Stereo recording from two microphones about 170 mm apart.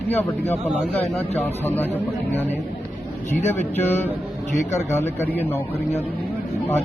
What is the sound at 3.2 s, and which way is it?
Speech, 10° left (ahead or behind).